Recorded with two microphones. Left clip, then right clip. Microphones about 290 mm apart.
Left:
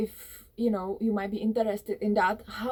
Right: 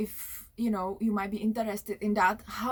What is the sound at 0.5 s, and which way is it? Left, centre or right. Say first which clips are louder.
Speech: left 3 dB; centre.